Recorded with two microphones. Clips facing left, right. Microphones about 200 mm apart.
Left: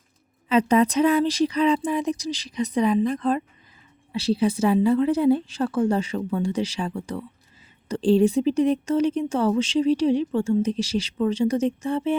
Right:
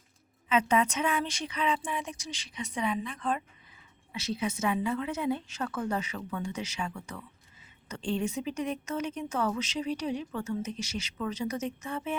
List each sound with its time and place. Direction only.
0.4 s speech: 35° left (ahead or behind)